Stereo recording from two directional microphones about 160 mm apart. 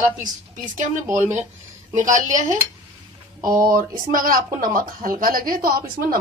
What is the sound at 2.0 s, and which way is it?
Speech, 50° right (ahead or behind).